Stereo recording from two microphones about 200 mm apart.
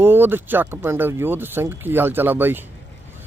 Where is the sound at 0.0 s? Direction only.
10° right (ahead or behind).